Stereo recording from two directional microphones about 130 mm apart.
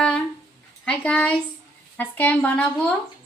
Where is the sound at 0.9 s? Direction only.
10° left (ahead or behind).